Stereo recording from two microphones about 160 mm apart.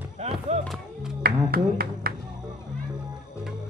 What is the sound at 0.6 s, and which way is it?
Music, centre (ahead or behind).